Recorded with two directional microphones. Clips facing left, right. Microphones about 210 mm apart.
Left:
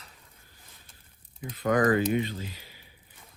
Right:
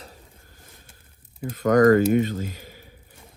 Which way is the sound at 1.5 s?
45° right (ahead or behind).